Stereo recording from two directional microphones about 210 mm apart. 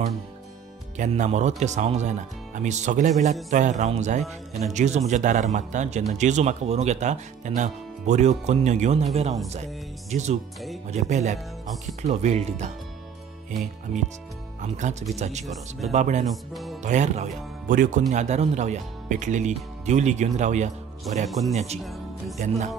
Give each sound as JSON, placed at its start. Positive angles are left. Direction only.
{"t": 0.9, "sound": "speech", "side_deg": -35}
{"t": 10.1, "sound": "speech", "side_deg": -35}
{"t": 14.6, "sound": "speech", "side_deg": -35}
{"t": 15.4, "sound": "speech", "side_deg": 0}
{"t": 15.9, "sound": "speech", "side_deg": -35}
{"t": 21.3, "sound": "speech", "side_deg": 0}
{"t": 22.4, "sound": "speech", "side_deg": -35}